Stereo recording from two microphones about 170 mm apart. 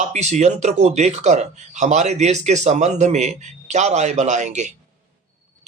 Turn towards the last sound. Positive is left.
turn(degrees=-45)  # may be behind; listen again after turning